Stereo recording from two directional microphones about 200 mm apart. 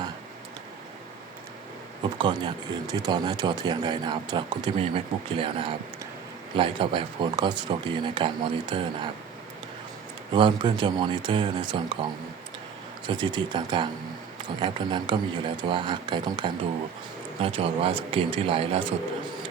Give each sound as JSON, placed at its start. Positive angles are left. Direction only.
{"t": 2.1, "sound": "speech", "side_deg": -25}
{"t": 10.3, "sound": "speech", "side_deg": -25}
{"t": 13.1, "sound": "speech", "side_deg": -25}